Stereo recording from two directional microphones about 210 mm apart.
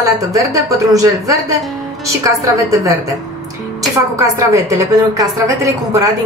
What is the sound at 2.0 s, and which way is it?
Speech, 15° right (ahead or behind).